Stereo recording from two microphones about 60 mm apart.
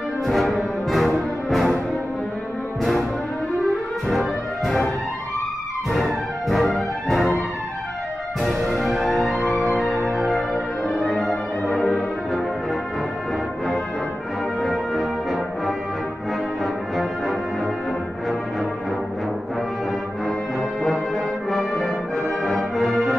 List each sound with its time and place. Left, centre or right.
0.3 s brass instrument: centre
1.5 s music: centre
2.8 s music: centre
4.1 s music: centre
5.9 s music: centre
6.7 s brass instrument: centre
8.4 s music: centre
11.1 s brass instrument: centre
14.6 s brass instrument: centre
16.9 s brass instrument: centre
21.5 s music: centre